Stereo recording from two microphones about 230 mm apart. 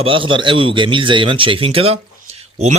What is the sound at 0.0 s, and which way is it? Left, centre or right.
A man's voice, right.